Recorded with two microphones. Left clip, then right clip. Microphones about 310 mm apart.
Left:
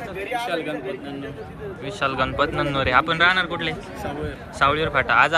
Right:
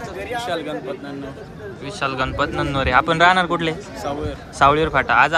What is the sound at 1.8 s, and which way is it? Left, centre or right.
A man's voice, centre.